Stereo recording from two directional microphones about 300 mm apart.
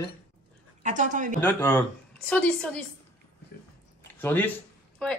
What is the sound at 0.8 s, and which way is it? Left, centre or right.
Speech, right.